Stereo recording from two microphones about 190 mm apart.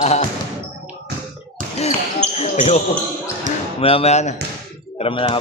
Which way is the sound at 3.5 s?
40° right (ahead or behind).